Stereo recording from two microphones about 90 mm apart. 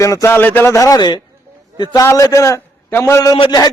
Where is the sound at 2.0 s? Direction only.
35° left (ahead or behind).